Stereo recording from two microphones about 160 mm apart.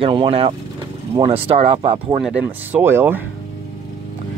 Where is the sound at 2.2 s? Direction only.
10° right (ahead or behind).